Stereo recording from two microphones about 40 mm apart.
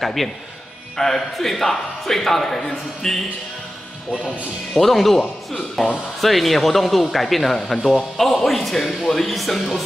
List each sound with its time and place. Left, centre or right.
0.0 s a man's voice: centre
4.7 s a man's voice: centre